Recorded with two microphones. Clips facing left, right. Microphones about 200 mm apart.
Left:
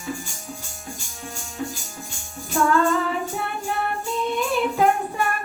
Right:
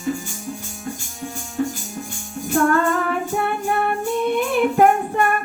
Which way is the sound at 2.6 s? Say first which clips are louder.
Left 2 dB; 60° right (ahead or behind).